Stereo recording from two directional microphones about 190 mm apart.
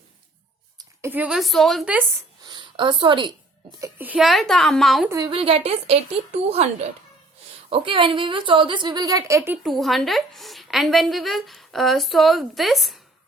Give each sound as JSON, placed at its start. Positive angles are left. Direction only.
{"t": 0.8, "sound": "a woman's voice", "side_deg": -10}
{"t": 2.4, "sound": "a sound", "side_deg": -25}
{"t": 3.8, "sound": "a woman's voice", "side_deg": -15}
{"t": 5.0, "sound": "a woman's voice", "side_deg": -20}
{"t": 5.3, "sound": "a woman's voice", "side_deg": -30}
{"t": 7.7, "sound": "a woman's voice", "side_deg": -25}
{"t": 9.6, "sound": "a woman's voice", "side_deg": 0}